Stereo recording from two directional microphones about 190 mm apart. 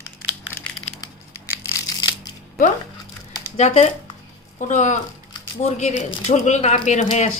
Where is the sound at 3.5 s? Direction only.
35° left (ahead or behind).